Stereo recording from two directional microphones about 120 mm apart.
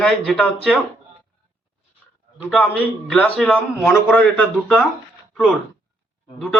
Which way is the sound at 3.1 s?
10° left (ahead or behind).